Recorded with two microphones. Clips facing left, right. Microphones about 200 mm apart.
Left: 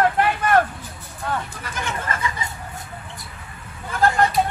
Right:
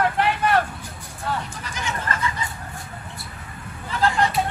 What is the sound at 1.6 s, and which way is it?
Speech, 55° left (ahead or behind).